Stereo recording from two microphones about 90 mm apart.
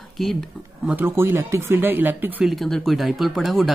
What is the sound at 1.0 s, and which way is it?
Speech, 25° right (ahead or behind).